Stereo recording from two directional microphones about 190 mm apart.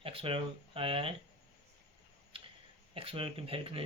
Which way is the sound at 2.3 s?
30° right (ahead or behind).